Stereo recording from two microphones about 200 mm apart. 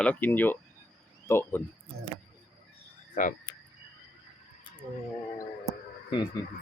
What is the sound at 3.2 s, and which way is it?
Speech, 40° left (ahead or behind).